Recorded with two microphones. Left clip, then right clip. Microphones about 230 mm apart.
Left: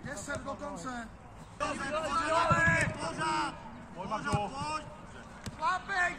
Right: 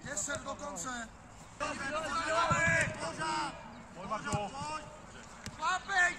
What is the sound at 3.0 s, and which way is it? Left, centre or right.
Speech, left.